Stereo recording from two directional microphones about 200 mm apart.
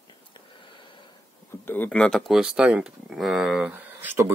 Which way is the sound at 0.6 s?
25° left (ahead or behind).